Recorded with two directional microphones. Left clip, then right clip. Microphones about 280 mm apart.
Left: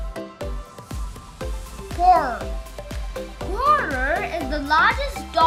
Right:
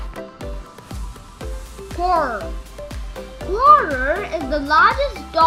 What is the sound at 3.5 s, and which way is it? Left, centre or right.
A child's voice, centre.